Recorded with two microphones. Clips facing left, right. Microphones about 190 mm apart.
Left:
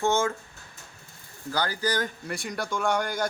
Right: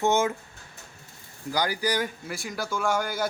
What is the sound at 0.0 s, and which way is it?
Speech, 20° right (ahead or behind).